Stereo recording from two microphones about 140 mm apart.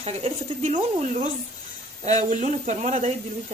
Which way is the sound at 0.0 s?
45° right (ahead or behind).